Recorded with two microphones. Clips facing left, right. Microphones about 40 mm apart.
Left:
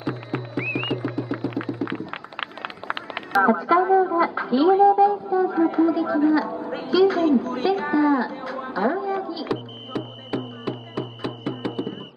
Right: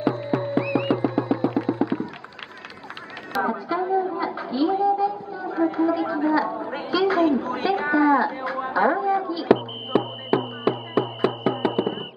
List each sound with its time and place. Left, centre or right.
0.3 s music: left
0.8 s music: centre
1.8 s a sound: right
3.5 s a woman's voice: centre
9.5 s music: right
11.1 s music: centre
11.5 s music: right